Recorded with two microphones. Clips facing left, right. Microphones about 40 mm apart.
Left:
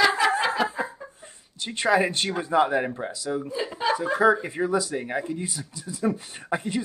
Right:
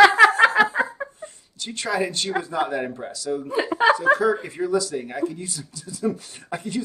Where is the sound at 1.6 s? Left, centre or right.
Left.